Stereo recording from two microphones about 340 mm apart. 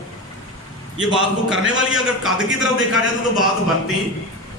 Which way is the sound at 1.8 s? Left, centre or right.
Centre.